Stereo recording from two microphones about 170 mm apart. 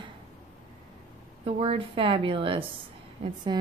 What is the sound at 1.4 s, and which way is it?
A woman's voice, 35° right (ahead or behind).